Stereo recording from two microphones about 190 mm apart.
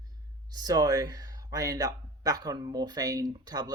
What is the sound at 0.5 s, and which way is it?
Speech, 20° right (ahead or behind).